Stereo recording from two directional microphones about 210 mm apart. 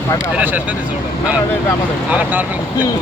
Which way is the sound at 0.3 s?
5° right (ahead or behind).